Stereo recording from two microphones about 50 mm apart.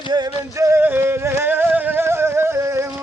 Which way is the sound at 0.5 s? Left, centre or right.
Right.